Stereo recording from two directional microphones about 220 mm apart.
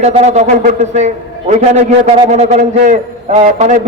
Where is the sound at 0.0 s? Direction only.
30° right (ahead or behind).